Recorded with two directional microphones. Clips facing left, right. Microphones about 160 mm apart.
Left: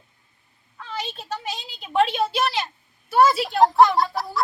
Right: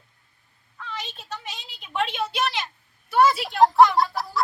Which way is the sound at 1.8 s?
35° left (ahead or behind).